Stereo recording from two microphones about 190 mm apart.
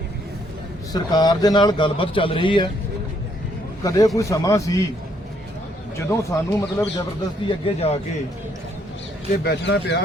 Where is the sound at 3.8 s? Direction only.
15° left (ahead or behind).